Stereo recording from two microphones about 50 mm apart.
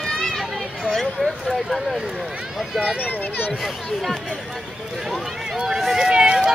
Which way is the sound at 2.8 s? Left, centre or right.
Left.